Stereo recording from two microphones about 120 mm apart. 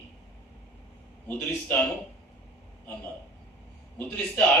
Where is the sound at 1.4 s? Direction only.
15° left (ahead or behind).